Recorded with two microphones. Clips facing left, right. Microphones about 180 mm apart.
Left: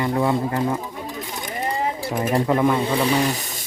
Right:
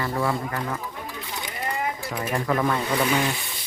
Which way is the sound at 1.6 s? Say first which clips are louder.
Left 4 dB; 30° left (ahead or behind).